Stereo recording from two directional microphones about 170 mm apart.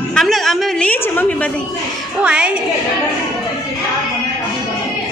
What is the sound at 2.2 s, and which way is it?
Speech, 5° right (ahead or behind).